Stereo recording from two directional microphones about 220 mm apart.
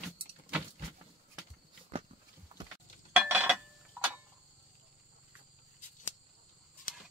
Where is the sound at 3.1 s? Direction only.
5° right (ahead or behind).